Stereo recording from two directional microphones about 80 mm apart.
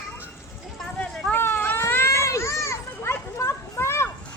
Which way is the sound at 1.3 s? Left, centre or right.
Left.